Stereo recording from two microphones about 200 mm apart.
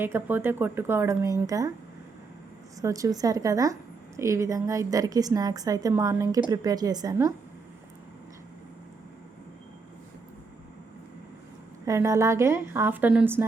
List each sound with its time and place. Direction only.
0.0 s a woman's voice: 10° right (ahead or behind)
2.8 s a woman's voice: 15° right (ahead or behind)
11.9 s a woman's voice: 15° right (ahead or behind)